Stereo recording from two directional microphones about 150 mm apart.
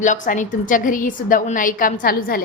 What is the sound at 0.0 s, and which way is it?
A woman's voice, 55° left (ahead or behind).